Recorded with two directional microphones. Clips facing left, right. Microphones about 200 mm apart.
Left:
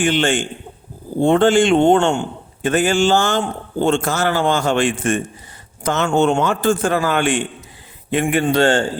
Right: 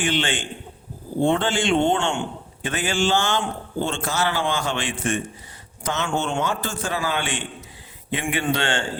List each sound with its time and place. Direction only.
0.0 s a man's voice: 45° left (ahead or behind)